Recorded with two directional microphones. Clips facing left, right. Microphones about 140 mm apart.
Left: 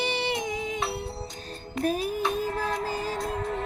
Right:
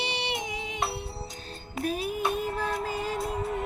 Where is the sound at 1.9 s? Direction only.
40° left (ahead or behind).